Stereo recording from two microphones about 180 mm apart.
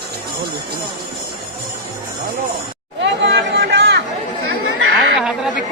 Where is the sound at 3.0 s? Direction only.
70° right (ahead or behind).